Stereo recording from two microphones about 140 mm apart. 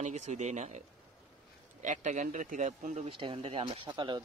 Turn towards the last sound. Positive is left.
turn(degrees=-35)  # may be behind; listen again after turning